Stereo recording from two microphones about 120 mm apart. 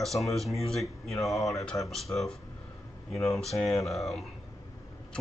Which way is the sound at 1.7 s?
20° left (ahead or behind).